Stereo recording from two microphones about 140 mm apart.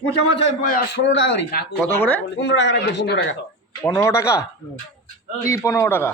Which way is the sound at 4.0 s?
20° left (ahead or behind).